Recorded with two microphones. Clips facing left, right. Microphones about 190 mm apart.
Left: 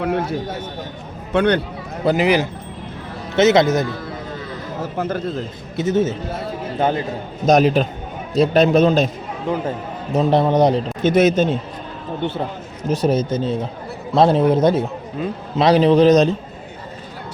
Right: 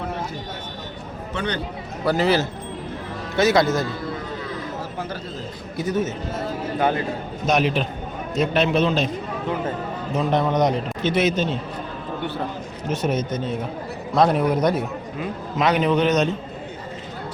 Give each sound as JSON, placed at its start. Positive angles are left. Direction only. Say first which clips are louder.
{"t": 0.0, "sound": "a man's voice", "louder": "left 8 dB", "side_deg": 65}
{"t": 1.3, "sound": "a man's voice", "louder": "left 11 dB", "side_deg": 60}
{"t": 2.0, "sound": "speech", "louder": "left 3 dB", "side_deg": 15}
{"t": 4.9, "sound": "a man's voice", "louder": "left 8 dB", "side_deg": 50}
{"t": 5.7, "sound": "speech", "louder": "left 5 dB", "side_deg": 25}
{"t": 7.4, "sound": "a man's voice", "louder": "left 7 dB", "side_deg": 40}
{"t": 10.2, "sound": "a man's voice", "louder": "left 5 dB", "side_deg": 30}
{"t": 11.0, "sound": "a man's voice", "louder": "left 6 dB", "side_deg": 45}
{"t": 12.9, "sound": "a man's voice", "louder": "left 5 dB", "side_deg": 35}